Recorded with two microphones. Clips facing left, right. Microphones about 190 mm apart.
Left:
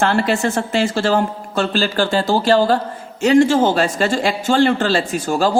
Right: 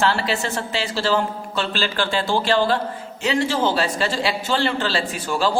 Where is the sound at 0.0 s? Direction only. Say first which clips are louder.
Left 5 dB; 50° left (ahead or behind).